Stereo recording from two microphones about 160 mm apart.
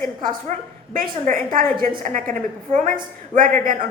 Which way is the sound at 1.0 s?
60° right (ahead or behind).